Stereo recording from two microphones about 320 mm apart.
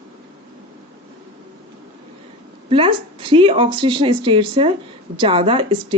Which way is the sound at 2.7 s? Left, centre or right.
Centre.